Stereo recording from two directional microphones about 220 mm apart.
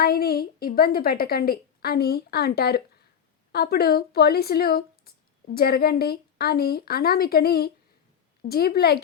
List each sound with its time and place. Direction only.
0.0 s speech: 45° left (ahead or behind)